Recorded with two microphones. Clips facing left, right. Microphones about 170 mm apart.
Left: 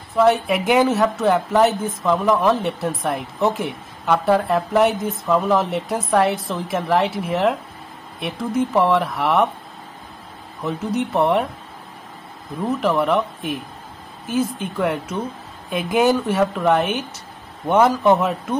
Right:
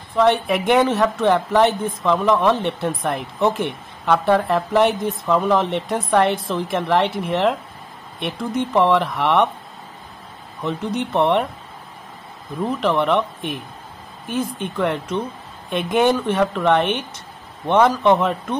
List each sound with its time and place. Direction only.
0.1 s speech: centre (ahead or behind)
10.6 s speech: centre (ahead or behind)
12.6 s speech: centre (ahead or behind)